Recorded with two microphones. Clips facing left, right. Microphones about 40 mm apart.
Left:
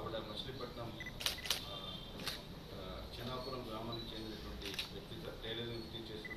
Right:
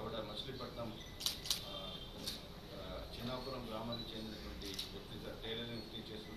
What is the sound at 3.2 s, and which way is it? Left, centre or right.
Speech, left.